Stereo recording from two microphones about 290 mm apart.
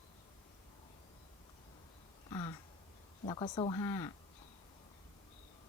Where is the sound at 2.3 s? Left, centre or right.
Centre.